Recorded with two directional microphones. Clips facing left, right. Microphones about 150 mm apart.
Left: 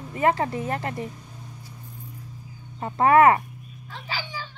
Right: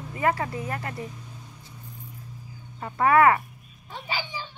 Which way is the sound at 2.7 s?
25° left (ahead or behind).